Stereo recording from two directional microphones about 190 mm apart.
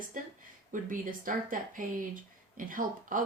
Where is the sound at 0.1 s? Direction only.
45° right (ahead or behind).